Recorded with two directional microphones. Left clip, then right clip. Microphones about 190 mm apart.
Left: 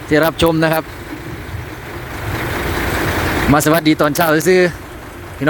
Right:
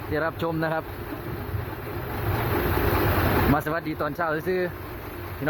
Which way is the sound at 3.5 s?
30° left (ahead or behind).